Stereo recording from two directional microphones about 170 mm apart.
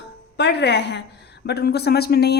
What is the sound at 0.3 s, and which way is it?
Speech, 80° left.